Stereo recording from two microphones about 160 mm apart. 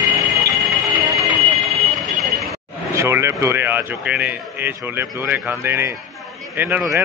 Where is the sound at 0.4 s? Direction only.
20° right (ahead or behind).